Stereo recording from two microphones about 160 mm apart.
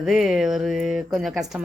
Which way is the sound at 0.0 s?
5° right (ahead or behind).